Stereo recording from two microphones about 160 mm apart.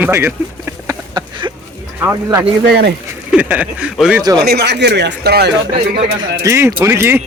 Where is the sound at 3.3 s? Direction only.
10° right (ahead or behind).